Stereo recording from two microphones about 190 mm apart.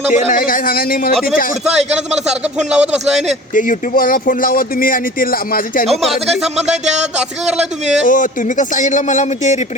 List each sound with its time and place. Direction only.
0.1 s speech: 45° left (ahead or behind)
1.6 s a man's voice: 35° right (ahead or behind)
2.2 s speech: 5° right (ahead or behind)
3.5 s speech: 45° left (ahead or behind)
5.8 s speech: centre (ahead or behind)
8.0 s speech: 45° left (ahead or behind)